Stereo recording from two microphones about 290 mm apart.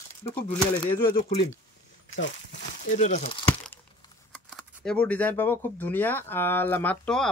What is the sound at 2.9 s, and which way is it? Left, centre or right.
Speech, left.